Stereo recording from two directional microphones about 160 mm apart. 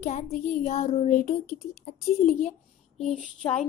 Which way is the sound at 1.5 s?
50° left (ahead or behind).